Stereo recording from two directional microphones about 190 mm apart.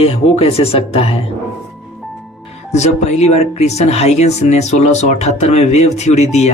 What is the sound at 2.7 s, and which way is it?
Speech, 35° left (ahead or behind).